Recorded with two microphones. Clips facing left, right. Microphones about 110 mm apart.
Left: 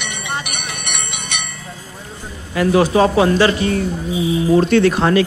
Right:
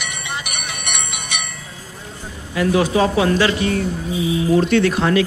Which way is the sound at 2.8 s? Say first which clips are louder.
Left 3 dB; 40° left (ahead or behind).